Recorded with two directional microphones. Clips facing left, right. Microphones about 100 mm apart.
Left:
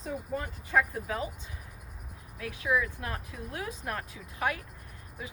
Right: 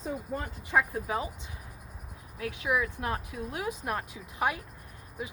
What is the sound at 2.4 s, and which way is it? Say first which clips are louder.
Speech: even; 20° right (ahead or behind).